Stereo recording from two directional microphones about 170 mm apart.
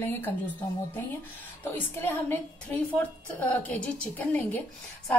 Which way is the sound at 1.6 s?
10° left (ahead or behind).